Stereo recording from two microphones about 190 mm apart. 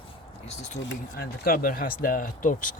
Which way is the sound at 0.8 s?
50° left (ahead or behind).